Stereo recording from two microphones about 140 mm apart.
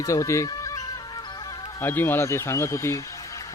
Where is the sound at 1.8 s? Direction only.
15° left (ahead or behind).